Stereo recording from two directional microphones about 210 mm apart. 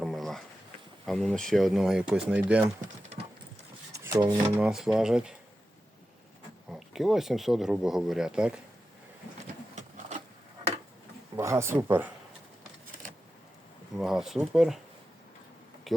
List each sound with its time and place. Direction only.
0.0 s a sound: centre (ahead or behind)
1.0 s speech: centre (ahead or behind)
2.8 s typing: 30° right (ahead or behind)
4.0 s speech: 15° right (ahead or behind)
4.6 s speech: centre (ahead or behind)
6.7 s speech: centre (ahead or behind)
11.3 s speech: 15° right (ahead or behind)
13.9 s speech: centre (ahead or behind)